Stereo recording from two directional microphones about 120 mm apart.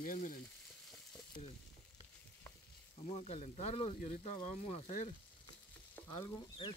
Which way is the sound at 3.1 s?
65° left (ahead or behind).